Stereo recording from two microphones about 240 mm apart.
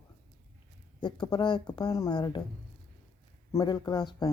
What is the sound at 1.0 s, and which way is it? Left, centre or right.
Speech, centre.